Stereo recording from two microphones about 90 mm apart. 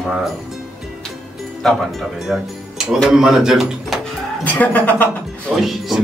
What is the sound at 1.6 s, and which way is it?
Speech, 5° left (ahead or behind).